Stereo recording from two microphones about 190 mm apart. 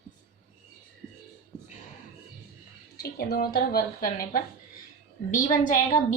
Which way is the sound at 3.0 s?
55° left (ahead or behind).